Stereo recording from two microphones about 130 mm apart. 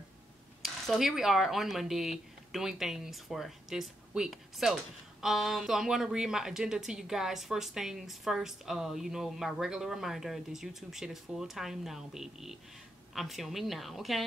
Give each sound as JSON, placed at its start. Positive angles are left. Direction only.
{"t": 0.6, "sound": "speech", "side_deg": 0}